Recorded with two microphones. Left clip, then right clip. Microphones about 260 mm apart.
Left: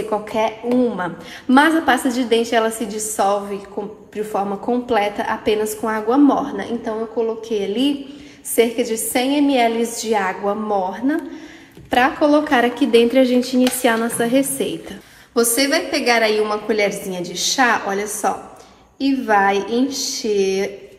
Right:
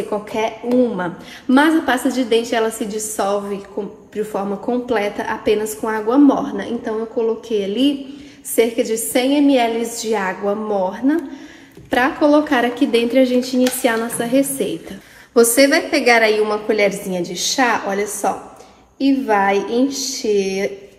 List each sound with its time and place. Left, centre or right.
0.1 s a woman's voice: left
15.5 s a woman's voice: centre